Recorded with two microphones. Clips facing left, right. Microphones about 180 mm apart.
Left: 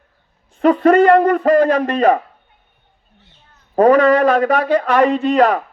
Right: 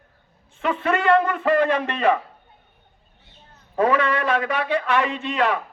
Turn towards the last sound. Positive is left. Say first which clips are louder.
# left 9 dB
turn(degrees=40)  # may be behind; listen again after turning